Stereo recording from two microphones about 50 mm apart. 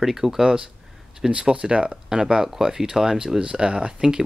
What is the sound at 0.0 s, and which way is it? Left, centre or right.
Speech, centre.